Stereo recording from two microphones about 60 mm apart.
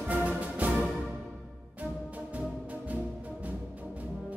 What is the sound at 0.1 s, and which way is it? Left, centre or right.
Music, right.